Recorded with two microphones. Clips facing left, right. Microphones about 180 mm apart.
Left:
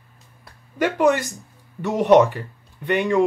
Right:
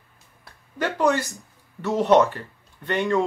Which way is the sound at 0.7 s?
15° left (ahead or behind).